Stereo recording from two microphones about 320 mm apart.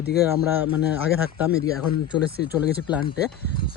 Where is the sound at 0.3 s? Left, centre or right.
Centre.